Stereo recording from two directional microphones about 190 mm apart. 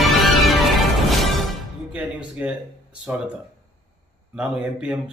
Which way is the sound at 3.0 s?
5° right (ahead or behind).